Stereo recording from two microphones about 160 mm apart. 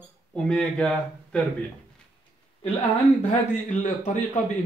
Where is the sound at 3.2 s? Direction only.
50° left (ahead or behind).